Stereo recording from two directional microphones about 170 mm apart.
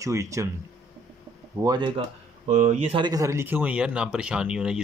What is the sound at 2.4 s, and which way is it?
Speech, 45° right (ahead or behind).